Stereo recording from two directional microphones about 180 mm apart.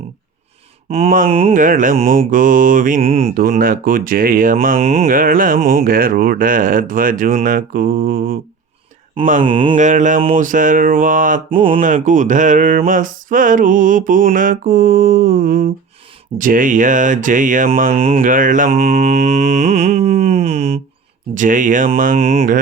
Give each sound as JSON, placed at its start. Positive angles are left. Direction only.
{"t": 0.9, "sound": "mantra", "side_deg": -35}
{"t": 1.3, "sound": "speech", "side_deg": -30}
{"t": 1.5, "sound": "speech", "side_deg": -45}
{"t": 3.0, "sound": "speech", "side_deg": -35}
{"t": 3.3, "sound": "speech", "side_deg": -55}
{"t": 4.8, "sound": "speech", "side_deg": -35}
{"t": 5.0, "sound": "speech", "side_deg": -50}
{"t": 9.4, "sound": "mantra", "side_deg": -30}
{"t": 9.7, "sound": "speech", "side_deg": -45}
{"t": 18.2, "sound": "mantra", "side_deg": -45}
{"t": 21.3, "sound": "speech", "side_deg": -45}